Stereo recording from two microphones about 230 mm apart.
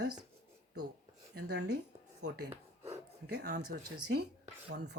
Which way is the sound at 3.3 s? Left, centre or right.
Right.